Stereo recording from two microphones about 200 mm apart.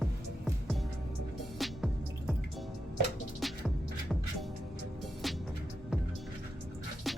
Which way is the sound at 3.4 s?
Centre (ahead or behind).